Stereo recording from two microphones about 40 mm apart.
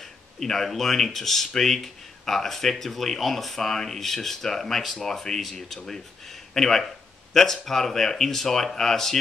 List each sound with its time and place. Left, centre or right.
0.0 s speech: centre